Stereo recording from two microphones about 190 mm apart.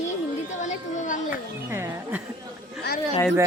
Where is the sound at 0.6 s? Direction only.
40° left (ahead or behind).